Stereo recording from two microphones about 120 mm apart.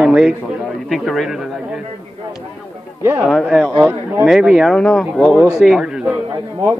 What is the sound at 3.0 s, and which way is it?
Speech, 20° right (ahead or behind).